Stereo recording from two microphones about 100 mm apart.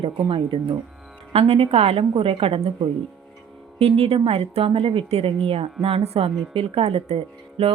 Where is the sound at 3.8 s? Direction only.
85° right.